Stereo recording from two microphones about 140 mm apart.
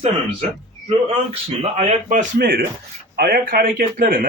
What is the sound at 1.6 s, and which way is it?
A man's voice, 50° right (ahead or behind).